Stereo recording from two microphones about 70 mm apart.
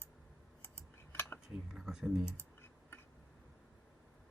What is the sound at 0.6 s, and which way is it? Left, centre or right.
Typing, left.